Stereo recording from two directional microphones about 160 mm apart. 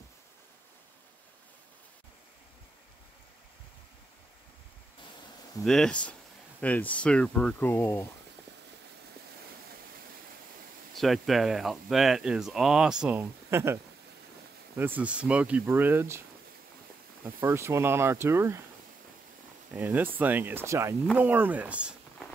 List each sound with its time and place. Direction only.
5.6 s speech: 5° left (ahead or behind)
11.0 s speech: centre (ahead or behind); by 13.7 s 15° right (ahead or behind)
14.8 s speech: 10° right (ahead or behind)
17.2 s speech: 15° right (ahead or behind)
19.7 s speech: 10° right (ahead or behind)